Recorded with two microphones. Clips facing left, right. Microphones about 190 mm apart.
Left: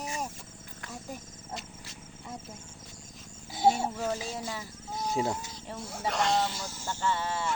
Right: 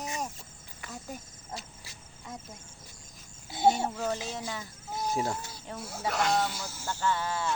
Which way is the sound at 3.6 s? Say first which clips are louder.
Even; centre (ahead or behind).